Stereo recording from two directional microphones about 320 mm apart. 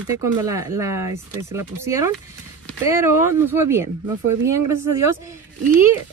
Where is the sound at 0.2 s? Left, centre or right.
Centre.